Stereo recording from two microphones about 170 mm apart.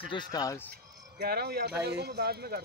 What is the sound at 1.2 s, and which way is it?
Speech, 70° right (ahead or behind).